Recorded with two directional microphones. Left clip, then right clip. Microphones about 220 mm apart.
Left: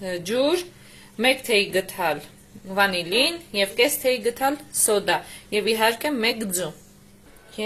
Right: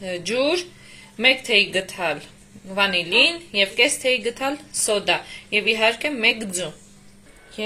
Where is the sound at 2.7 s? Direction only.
Centre (ahead or behind).